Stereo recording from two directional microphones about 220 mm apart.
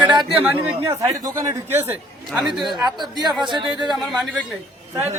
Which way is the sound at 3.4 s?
20° right (ahead or behind).